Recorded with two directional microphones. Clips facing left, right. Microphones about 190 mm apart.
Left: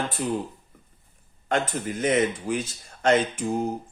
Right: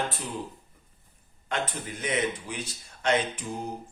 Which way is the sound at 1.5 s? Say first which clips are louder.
Left 6 dB; 45° left (ahead or behind).